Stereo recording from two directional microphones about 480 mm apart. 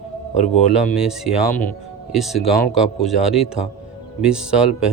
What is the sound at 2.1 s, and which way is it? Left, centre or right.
Speech, centre.